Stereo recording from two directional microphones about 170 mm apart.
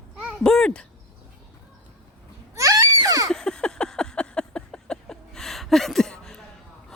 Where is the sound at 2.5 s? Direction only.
20° right (ahead or behind).